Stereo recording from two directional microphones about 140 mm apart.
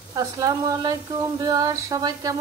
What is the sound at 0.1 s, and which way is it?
Frying, 25° right (ahead or behind).